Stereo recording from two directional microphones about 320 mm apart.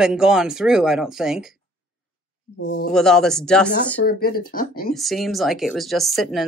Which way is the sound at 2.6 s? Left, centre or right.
Left.